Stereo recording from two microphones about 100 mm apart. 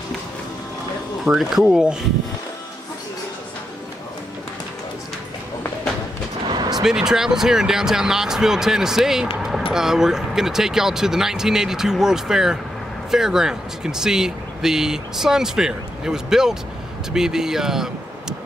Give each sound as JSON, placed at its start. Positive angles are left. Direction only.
{"t": 1.2, "sound": "speech", "side_deg": -5}
{"t": 6.4, "sound": "gunshot", "side_deg": -45}
{"t": 6.8, "sound": "speech", "side_deg": -5}